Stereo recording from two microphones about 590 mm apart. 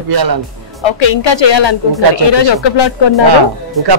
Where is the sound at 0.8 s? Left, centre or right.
Left.